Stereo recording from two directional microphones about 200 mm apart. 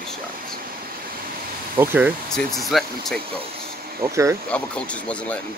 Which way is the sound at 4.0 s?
15° right (ahead or behind).